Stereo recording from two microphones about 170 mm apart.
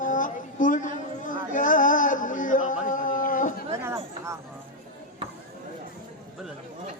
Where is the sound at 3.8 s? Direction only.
15° right (ahead or behind).